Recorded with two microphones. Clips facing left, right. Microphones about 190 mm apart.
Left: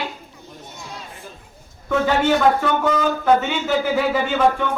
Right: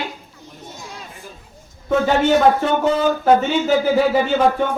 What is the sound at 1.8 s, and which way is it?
A man's voice, 30° right (ahead or behind).